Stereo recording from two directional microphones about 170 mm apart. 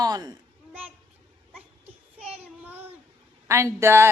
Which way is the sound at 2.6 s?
10° right (ahead or behind).